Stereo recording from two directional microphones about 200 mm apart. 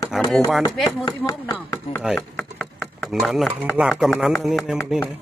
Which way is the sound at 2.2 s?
10° left (ahead or behind).